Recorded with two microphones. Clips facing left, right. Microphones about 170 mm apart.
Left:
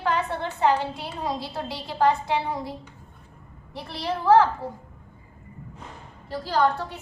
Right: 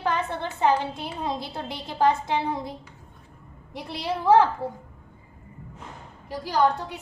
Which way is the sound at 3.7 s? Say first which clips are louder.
Even; 15° right (ahead or behind).